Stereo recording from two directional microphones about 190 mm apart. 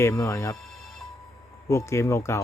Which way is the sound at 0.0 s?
15° left (ahead or behind).